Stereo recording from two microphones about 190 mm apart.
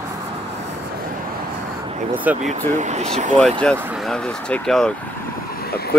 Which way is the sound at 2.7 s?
40° right (ahead or behind).